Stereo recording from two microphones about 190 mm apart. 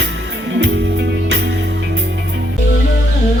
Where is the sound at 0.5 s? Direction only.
65° right (ahead or behind).